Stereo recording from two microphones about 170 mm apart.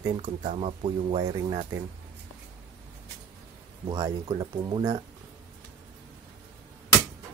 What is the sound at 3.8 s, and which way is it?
Speech, 25° right (ahead or behind).